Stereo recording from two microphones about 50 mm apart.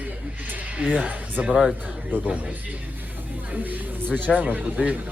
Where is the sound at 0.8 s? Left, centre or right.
Right.